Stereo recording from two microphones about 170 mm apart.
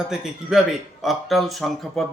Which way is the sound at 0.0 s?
5° right (ahead or behind).